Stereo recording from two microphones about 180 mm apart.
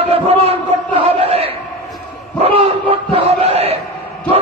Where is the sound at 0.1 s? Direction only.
35° right (ahead or behind).